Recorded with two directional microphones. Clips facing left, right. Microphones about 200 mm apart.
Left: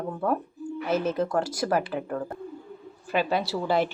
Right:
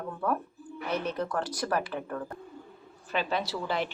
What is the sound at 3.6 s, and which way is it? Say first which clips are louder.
Speech: left 7 dB; 40° left (ahead or behind).